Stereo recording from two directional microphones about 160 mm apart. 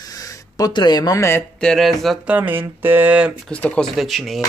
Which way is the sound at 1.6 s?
5° left (ahead or behind).